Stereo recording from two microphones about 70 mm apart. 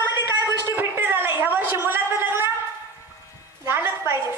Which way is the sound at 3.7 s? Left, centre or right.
Right.